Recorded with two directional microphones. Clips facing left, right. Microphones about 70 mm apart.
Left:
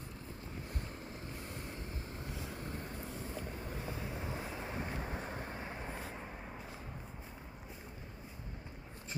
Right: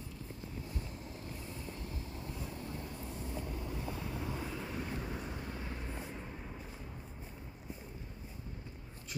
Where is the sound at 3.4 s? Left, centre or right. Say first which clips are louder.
Right 2 dB; left.